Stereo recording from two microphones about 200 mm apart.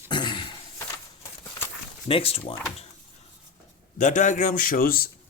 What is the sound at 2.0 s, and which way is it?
Speech, 30° left (ahead or behind).